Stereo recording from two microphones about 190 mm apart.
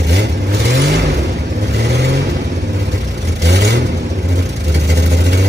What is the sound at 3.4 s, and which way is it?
Vehicle, 65° right (ahead or behind).